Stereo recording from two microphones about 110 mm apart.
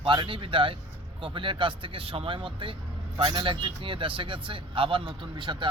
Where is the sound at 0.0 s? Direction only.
50° right (ahead or behind).